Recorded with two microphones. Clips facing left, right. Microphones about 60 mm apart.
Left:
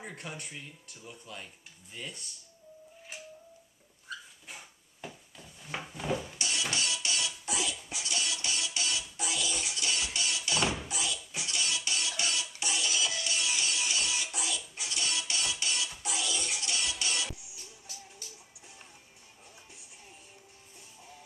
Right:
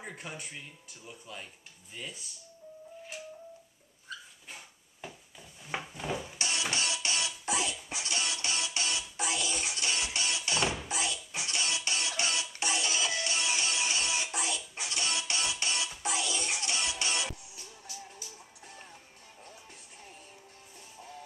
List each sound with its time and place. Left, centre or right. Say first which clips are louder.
0.0 s speech: even; centre
4.1 s dog: left 1 dB; centre
6.3 s music: right 1 dB; right
10.9 s a sound: right 2 dB; right
11.3 s music: right 1 dB; right